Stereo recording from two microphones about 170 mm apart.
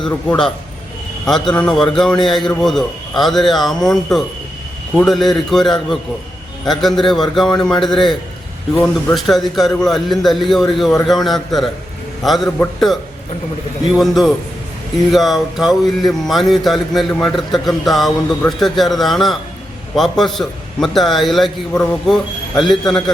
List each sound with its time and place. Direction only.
0.3 s speech: 5° left (ahead or behind)